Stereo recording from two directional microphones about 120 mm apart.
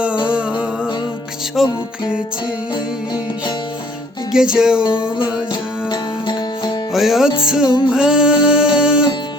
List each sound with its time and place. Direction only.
0.3 s music: 10° right (ahead or behind)
4.3 s music: 5° right (ahead or behind)
4.9 s music: 45° left (ahead or behind)
6.9 s music: centre (ahead or behind)